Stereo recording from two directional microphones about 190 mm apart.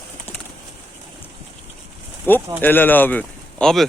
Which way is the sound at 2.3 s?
10° left (ahead or behind).